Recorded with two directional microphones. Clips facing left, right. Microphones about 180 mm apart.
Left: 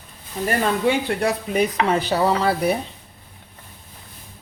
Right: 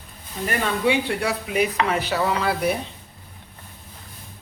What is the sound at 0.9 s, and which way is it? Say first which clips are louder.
Speech: right 1 dB; 40° left (ahead or behind).